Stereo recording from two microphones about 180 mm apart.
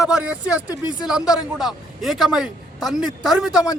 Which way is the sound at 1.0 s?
5° right (ahead or behind).